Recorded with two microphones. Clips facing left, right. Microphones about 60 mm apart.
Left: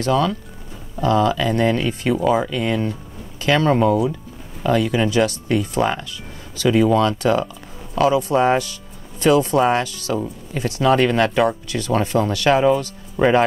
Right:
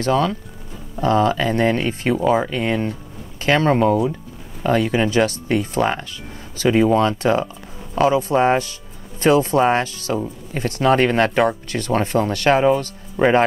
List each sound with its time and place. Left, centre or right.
0.0 s speech: right